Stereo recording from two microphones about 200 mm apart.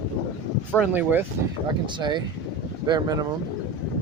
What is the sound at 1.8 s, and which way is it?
Speech, 25° right (ahead or behind).